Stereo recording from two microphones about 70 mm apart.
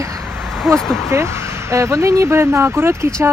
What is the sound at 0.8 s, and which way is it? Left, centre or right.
Speech, centre.